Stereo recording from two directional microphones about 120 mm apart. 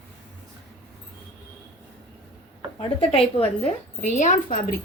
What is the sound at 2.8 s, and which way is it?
Speech, 50° left (ahead or behind).